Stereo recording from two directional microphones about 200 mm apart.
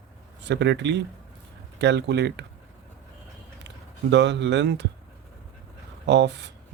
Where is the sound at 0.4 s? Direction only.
60° right (ahead or behind).